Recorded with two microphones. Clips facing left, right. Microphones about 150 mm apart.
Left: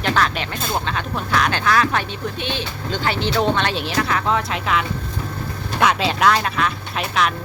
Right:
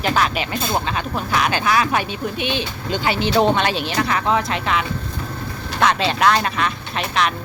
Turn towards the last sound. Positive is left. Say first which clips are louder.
# even
turn(degrees=0)  # may be behind; listen again after turning